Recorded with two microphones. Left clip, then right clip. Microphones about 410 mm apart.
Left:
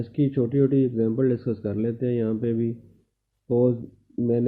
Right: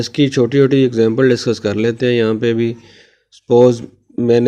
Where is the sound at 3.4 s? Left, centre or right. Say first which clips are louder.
Right 12 dB; right.